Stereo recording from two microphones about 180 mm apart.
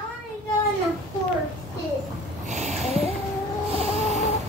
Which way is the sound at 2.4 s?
40° right (ahead or behind).